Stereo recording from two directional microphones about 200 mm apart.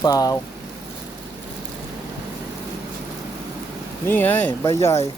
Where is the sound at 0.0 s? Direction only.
20° left (ahead or behind).